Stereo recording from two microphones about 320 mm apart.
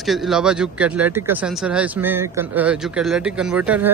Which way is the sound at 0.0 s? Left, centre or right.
Centre.